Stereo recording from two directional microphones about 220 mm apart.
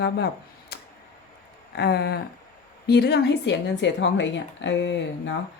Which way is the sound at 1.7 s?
45° left (ahead or behind).